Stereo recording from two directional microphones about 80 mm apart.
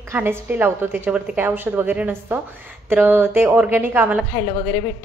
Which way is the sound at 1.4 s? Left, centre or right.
Right.